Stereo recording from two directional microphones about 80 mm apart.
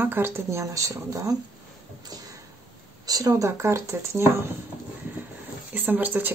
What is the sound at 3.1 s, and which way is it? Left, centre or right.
Speech, right.